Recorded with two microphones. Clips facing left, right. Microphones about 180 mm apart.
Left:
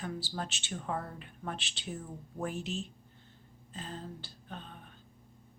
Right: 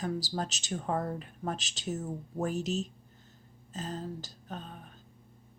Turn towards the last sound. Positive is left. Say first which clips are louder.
# right 4 dB
turn(degrees=-40)  # may be behind; listen again after turning